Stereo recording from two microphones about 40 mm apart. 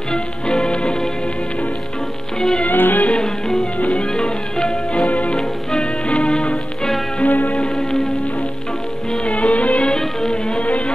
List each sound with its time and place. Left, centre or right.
0.1 s music: centre
2.6 s music: left
3.8 s music: left
4.2 s music: left
5.0 s music: left
7.2 s music: left
7.5 s music: centre
9.2 s music: left
9.8 s music: centre